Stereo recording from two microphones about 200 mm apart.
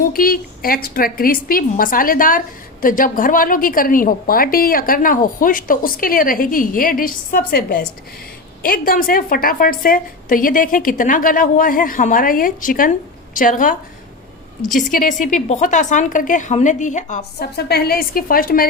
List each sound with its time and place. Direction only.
0.0 s a woman's voice: 45° left (ahead or behind)
14.8 s a woman's voice: 40° left (ahead or behind)
17.4 s a woman's voice: 50° left (ahead or behind)